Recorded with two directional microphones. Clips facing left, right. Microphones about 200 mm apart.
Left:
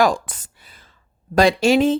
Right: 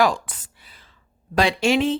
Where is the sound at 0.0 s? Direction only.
45° left (ahead or behind).